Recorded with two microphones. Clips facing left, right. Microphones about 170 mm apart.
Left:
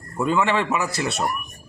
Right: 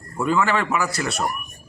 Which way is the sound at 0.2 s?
Centre (ahead or behind).